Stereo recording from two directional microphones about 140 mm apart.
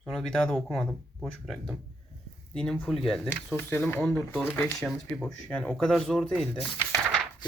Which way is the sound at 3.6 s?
15° left (ahead or behind).